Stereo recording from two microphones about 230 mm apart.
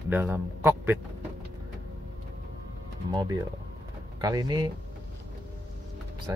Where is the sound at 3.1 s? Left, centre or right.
Centre.